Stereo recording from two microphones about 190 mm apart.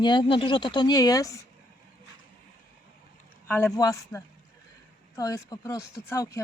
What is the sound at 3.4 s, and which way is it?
Speech, 10° left (ahead or behind).